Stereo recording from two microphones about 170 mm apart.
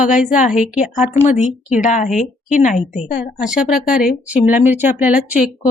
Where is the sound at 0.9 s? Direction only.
50° left (ahead or behind).